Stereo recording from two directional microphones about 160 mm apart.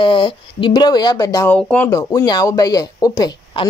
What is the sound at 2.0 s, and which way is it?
A woman's voice, 20° left (ahead or behind).